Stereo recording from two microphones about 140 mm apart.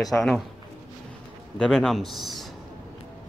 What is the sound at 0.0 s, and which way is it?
Speech, 5° left (ahead or behind).